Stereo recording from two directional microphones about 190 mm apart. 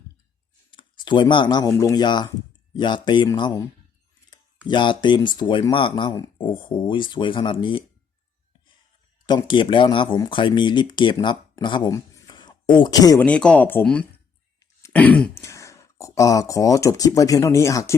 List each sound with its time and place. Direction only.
0.7 s speech: 25° left (ahead or behind)
4.7 s speech: 25° left (ahead or behind)
9.2 s speech: 25° left (ahead or behind)
13.2 s speech: 5° left (ahead or behind)